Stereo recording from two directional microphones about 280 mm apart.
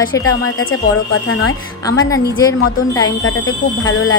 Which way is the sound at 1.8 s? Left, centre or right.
Centre.